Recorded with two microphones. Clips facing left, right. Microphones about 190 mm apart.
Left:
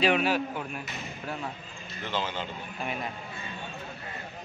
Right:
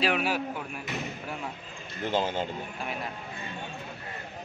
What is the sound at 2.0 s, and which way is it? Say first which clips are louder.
Speech: right 5 dB; 45° right (ahead or behind).